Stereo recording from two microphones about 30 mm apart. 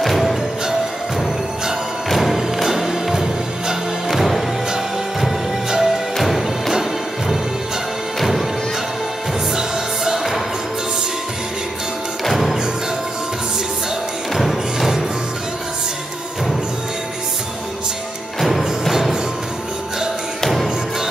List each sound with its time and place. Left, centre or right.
0.0 s music: centre
2.6 s music: centre
5.7 s music: centre
6.1 s music: centre
9.6 s music: centre
12.3 s music: centre
14.3 s music: centre